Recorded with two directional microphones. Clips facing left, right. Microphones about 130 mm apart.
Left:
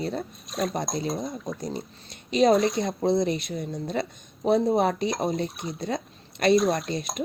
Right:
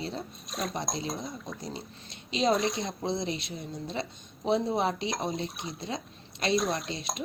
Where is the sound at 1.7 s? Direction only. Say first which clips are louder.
Left 6 dB; 50° left (ahead or behind).